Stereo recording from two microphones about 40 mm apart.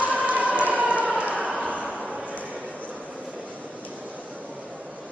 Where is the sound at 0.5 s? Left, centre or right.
Right.